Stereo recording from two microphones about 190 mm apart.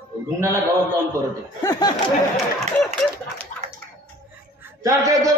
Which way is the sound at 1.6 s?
20° left (ahead or behind).